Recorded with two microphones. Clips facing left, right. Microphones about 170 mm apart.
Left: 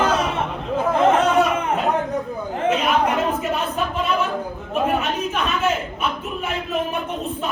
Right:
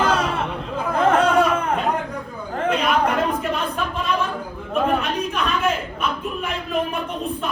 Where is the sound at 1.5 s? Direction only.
5° left (ahead or behind).